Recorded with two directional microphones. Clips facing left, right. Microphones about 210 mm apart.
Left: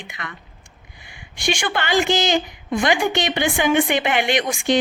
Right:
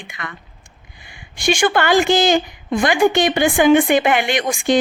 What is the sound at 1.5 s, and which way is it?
Speech, 50° right (ahead or behind).